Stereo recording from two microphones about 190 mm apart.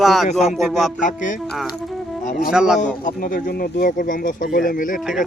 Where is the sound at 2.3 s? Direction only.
40° left (ahead or behind).